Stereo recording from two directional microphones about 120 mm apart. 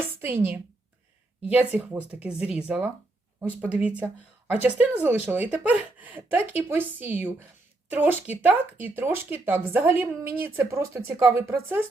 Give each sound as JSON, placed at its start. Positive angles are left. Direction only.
{"t": 0.2, "sound": "a woman's voice", "side_deg": -20}